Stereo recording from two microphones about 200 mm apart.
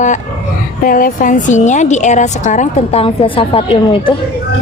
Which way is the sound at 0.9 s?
45° left (ahead or behind).